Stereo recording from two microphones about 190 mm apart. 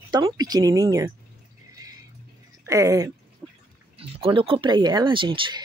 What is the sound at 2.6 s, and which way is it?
Speech, 15° right (ahead or behind).